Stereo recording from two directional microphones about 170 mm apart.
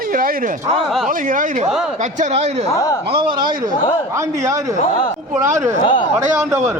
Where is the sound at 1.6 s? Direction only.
Centre (ahead or behind).